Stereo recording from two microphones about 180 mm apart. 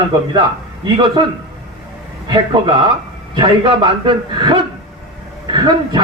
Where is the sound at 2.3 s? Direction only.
25° right (ahead or behind).